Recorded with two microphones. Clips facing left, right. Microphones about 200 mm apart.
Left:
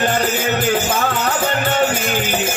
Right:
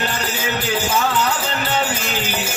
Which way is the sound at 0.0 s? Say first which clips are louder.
Left 6 dB; 50° left (ahead or behind).